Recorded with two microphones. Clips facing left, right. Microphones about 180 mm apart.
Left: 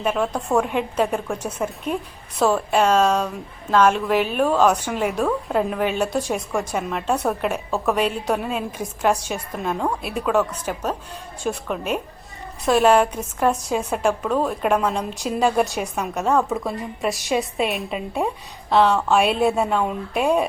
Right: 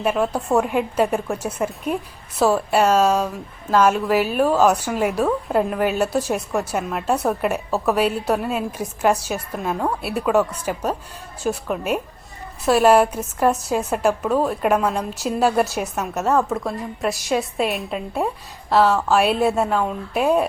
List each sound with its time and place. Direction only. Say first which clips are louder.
0.0 s a woman's voice: right 2 dB; 5° right (ahead or behind)